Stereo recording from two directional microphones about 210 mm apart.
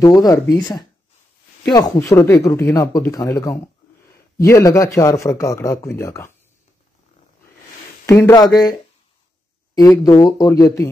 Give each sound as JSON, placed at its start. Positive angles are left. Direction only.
{"t": 0.0, "sound": "speech", "side_deg": 20}
{"t": 8.1, "sound": "speech", "side_deg": 15}
{"t": 9.8, "sound": "speech", "side_deg": 15}